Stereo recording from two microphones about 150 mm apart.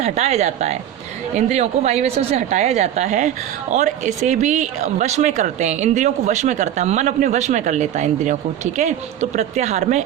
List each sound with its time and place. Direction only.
0.0 s a woman's voice: 45° right (ahead or behind)